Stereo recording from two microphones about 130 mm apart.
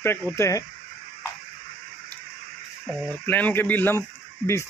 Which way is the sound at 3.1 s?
15° left (ahead or behind).